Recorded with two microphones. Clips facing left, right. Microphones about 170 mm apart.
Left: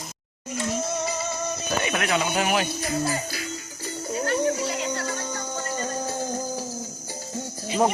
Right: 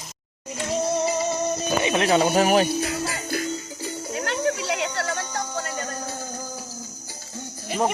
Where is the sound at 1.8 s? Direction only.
25° right (ahead or behind).